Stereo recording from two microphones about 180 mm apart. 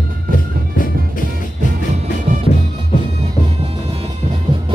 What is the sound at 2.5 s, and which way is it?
Music, 50° left (ahead or behind).